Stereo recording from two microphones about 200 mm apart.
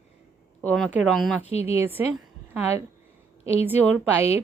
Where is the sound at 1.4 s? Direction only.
30° left (ahead or behind).